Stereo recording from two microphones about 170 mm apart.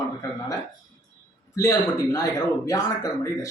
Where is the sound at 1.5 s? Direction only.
20° left (ahead or behind).